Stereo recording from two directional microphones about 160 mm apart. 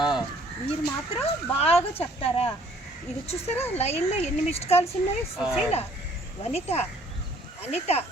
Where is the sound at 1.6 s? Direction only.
40° left (ahead or behind).